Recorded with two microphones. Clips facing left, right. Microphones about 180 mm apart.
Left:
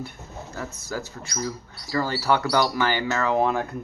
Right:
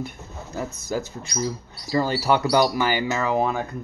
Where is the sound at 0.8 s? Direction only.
20° right (ahead or behind).